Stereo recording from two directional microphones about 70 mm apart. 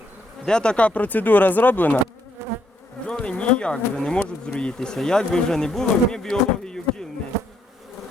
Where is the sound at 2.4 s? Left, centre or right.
Right.